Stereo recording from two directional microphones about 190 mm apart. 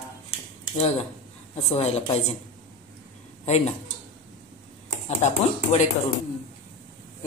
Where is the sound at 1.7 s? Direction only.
35° left (ahead or behind).